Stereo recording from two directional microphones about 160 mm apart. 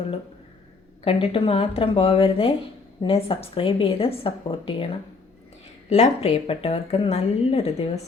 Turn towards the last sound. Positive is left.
turn(degrees=40)  # may be behind; listen again after turning